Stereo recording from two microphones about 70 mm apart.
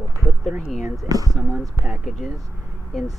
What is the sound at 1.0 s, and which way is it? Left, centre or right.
Speech, right.